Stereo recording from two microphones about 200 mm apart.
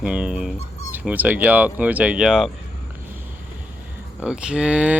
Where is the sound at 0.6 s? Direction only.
35° left (ahead or behind).